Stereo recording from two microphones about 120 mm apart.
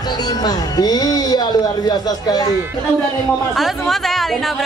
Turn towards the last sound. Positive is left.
turn(degrees=0)  # may be behind; listen again after turning